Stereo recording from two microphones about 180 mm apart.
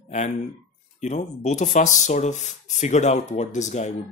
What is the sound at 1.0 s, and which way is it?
Speech, 40° left (ahead or behind).